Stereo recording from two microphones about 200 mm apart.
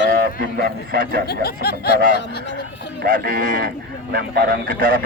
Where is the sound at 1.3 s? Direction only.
50° left (ahead or behind).